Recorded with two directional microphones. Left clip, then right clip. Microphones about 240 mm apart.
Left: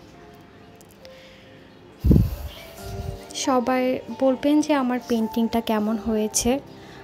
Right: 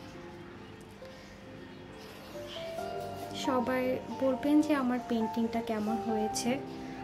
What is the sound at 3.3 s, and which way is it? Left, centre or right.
A woman's voice, left.